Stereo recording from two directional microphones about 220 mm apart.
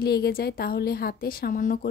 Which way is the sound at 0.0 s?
45° left (ahead or behind).